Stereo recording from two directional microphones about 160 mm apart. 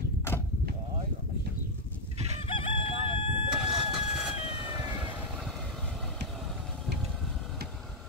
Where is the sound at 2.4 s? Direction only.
35° left (ahead or behind).